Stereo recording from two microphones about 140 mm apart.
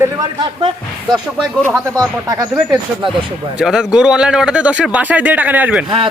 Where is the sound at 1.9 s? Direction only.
25° right (ahead or behind).